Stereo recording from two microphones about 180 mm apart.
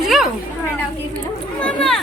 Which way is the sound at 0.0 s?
Centre (ahead or behind).